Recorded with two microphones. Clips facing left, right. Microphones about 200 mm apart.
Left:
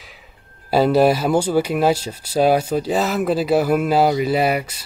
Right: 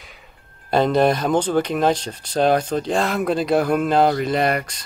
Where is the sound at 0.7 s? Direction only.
5° left (ahead or behind).